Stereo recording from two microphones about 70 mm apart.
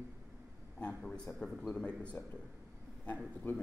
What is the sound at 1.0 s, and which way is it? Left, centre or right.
A man's voice, centre.